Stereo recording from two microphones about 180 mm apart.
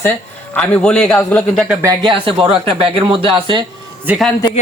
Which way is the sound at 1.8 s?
25° right (ahead or behind).